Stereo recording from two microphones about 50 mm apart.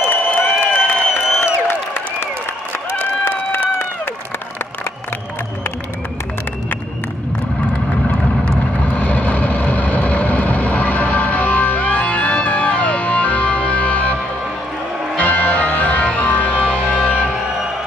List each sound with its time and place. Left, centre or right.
0.1 s a sound: left
3.3 s run: left
8.9 s vehicle: left
15.1 s music: left